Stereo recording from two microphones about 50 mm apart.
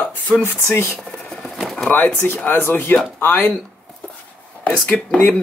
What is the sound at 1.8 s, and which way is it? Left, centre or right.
Speech, left.